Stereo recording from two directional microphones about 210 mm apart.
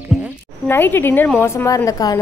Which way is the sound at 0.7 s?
10° left (ahead or behind).